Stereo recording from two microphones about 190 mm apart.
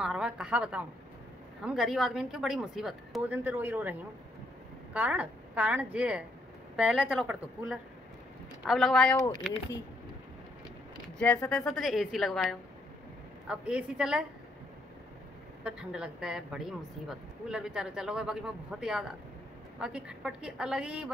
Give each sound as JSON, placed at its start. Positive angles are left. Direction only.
{"t": 0.0, "sound": "a woman's voice", "side_deg": -5}
{"t": 4.9, "sound": "a woman's voice", "side_deg": -5}
{"t": 9.1, "sound": "speech", "side_deg": 20}
{"t": 11.4, "sound": "a woman's voice", "side_deg": 5}
{"t": 15.6, "sound": "a woman's voice", "side_deg": -5}